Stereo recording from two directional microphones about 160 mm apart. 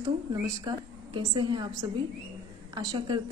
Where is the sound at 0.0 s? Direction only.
25° right (ahead or behind).